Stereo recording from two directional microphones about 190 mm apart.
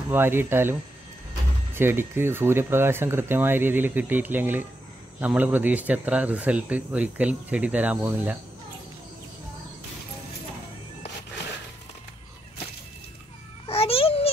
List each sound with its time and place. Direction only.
0.1 s speech: 10° right (ahead or behind)
13.7 s babbling: 30° left (ahead or behind)